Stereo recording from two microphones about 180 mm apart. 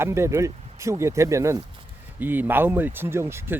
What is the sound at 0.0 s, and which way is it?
Speech, 15° right (ahead or behind).